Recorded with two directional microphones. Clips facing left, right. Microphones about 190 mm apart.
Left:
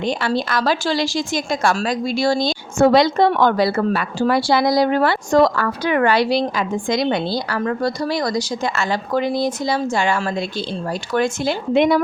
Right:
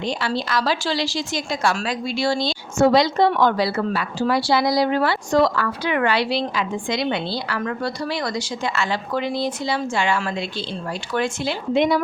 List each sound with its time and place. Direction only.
0.0 s a woman's voice: 50° left (ahead or behind)